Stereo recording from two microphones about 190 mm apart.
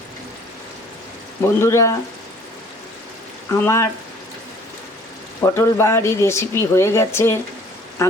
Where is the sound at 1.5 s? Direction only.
15° left (ahead or behind).